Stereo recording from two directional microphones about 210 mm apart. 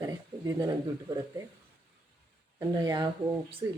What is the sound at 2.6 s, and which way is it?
Speech, 20° right (ahead or behind).